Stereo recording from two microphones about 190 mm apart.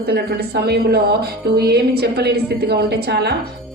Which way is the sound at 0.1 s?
60° right (ahead or behind).